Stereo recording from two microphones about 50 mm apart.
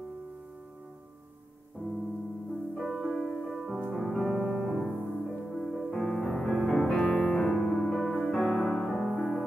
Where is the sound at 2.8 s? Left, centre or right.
Centre.